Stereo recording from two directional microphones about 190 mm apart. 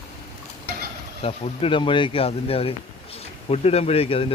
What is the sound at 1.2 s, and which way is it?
Speech, 30° left (ahead or behind).